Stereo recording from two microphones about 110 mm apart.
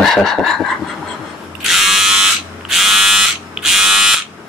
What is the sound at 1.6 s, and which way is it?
Electric shaver, centre (ahead or behind).